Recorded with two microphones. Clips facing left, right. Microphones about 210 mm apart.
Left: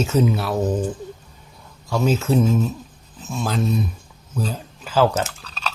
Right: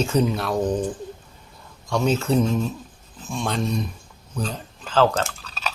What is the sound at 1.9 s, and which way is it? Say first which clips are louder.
Speech: left 1 dB; 5° left (ahead or behind).